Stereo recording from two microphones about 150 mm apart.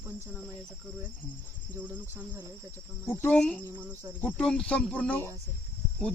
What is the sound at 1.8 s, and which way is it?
Speech, 10° right (ahead or behind).